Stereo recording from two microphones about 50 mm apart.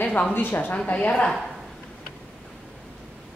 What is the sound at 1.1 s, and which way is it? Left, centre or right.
Speech, centre.